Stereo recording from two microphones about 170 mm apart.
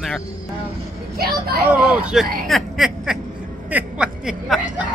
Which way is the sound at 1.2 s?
65° right (ahead or behind).